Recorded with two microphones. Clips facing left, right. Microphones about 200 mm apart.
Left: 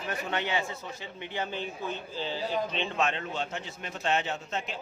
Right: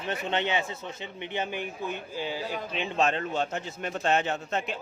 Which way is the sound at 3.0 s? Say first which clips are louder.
Right 6 dB; 40° right (ahead or behind).